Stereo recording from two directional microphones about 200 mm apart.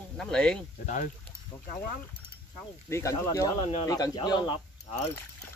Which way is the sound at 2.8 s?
15° left (ahead or behind).